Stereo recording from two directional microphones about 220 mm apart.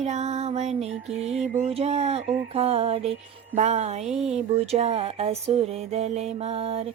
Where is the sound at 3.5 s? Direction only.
30° right (ahead or behind).